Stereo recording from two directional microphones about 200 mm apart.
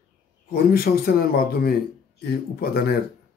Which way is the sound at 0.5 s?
50° left (ahead or behind).